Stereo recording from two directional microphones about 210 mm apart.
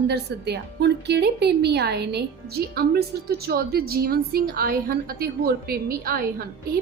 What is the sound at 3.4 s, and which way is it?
A woman's voice, 45° right (ahead or behind).